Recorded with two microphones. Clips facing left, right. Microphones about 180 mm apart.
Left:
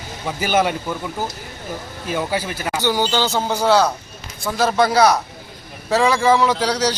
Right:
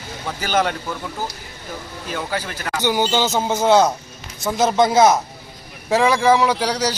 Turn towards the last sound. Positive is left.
turn(degrees=-10)  # may be behind; listen again after turning